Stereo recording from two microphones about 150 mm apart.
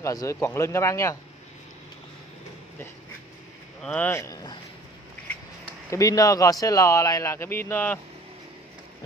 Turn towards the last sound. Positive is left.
turn(degrees=15)  # may be behind; listen again after turning